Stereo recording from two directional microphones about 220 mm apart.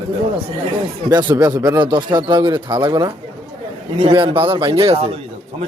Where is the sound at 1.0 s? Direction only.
15° right (ahead or behind).